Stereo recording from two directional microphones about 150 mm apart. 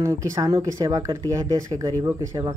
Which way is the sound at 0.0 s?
20° right (ahead or behind).